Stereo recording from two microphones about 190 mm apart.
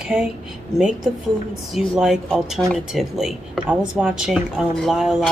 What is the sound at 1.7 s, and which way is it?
Speech, centre (ahead or behind).